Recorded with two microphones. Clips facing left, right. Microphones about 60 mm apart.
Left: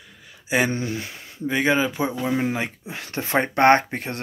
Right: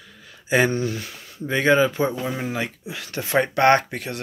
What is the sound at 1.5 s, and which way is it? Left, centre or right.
Speech, centre.